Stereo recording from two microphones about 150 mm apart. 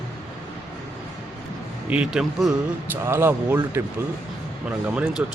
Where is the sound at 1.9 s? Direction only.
5° right (ahead or behind).